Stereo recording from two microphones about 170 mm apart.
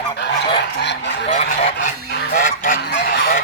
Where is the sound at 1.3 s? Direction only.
40° left (ahead or behind).